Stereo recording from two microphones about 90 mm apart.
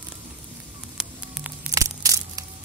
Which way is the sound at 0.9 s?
10° right (ahead or behind).